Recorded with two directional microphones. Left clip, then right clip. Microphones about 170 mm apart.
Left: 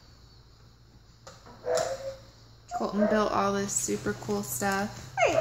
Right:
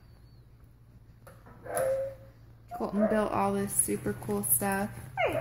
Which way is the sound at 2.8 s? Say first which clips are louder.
Left 2 dB; 20° right (ahead or behind).